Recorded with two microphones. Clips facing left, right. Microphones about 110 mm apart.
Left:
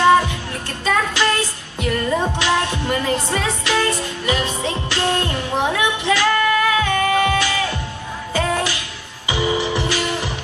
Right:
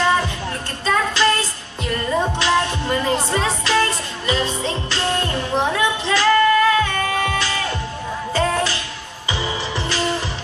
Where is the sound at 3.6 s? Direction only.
15° left (ahead or behind).